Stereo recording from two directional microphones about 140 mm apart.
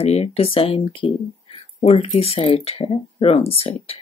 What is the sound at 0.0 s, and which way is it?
Speech, 45° left (ahead or behind).